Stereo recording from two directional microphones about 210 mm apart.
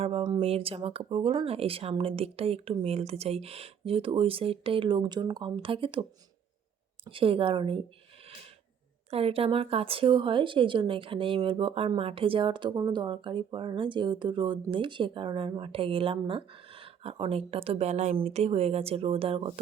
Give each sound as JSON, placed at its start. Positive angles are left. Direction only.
{"t": 0.0, "sound": "speech", "side_deg": -25}
{"t": 9.0, "sound": "speech", "side_deg": -30}